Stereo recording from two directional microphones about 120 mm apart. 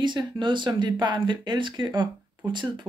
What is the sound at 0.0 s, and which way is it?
Speech, 40° right (ahead or behind).